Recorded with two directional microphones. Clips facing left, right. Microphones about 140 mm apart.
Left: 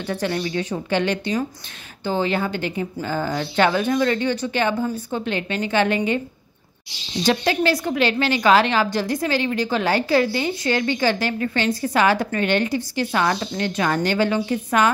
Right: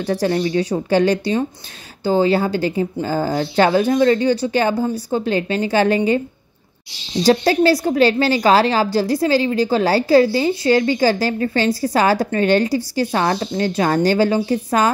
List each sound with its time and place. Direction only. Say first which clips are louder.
0.0 s a woman's voice: right 6 dB; 35° right (ahead or behind)
7.2 s a woman's voice: right 6 dB; 35° right (ahead or behind)